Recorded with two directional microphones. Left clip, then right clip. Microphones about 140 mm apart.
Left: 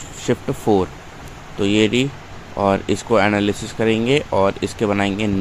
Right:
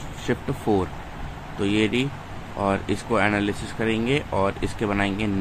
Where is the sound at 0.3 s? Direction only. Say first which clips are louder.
Left 6 dB; 40° left (ahead or behind).